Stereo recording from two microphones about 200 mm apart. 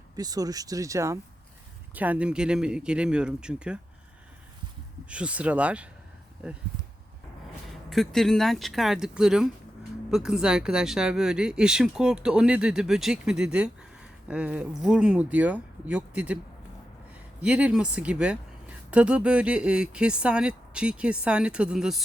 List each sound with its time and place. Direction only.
0.2 s speech: 20° right (ahead or behind)
5.0 s speech: 5° right (ahead or behind)
7.9 s speech: centre (ahead or behind)
17.4 s speech: 5° right (ahead or behind)